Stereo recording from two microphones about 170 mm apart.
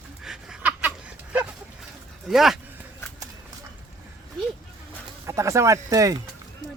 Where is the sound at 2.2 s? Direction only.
Centre (ahead or behind).